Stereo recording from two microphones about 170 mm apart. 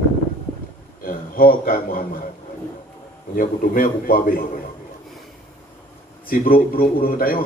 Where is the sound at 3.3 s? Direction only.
55° left (ahead or behind).